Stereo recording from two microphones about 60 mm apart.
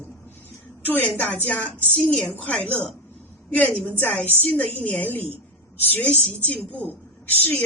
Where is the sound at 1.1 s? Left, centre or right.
Left.